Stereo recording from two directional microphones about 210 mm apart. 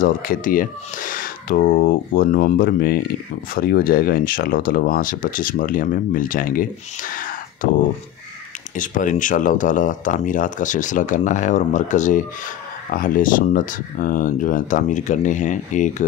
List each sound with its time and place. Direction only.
0.0 s speech: 40° left (ahead or behind)
8.7 s speech: 40° left (ahead or behind)